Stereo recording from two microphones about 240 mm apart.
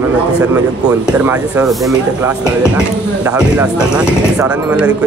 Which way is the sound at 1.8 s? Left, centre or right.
Centre.